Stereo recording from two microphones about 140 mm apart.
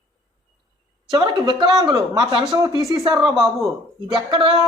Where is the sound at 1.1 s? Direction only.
35° right (ahead or behind).